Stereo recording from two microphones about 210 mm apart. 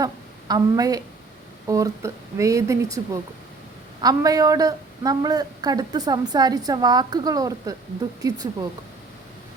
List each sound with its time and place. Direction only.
0.0 s a woman's voice: 20° right (ahead or behind)